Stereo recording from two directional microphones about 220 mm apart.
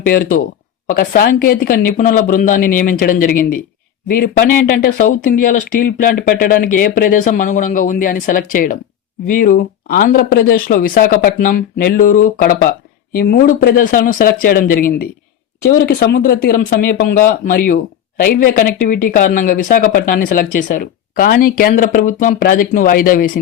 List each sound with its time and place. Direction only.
0.0 s speech: 40° left (ahead or behind)